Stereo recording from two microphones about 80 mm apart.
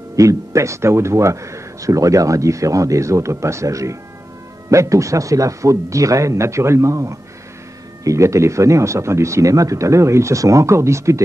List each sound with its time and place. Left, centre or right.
0.1 s speech: right